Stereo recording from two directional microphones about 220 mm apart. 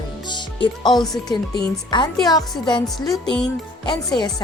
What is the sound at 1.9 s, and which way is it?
Speech, 20° left (ahead or behind).